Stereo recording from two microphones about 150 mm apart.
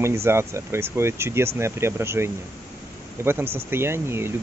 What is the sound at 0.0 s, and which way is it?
Speech, 15° right (ahead or behind).